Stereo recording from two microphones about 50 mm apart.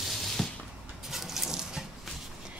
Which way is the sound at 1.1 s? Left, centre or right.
Centre.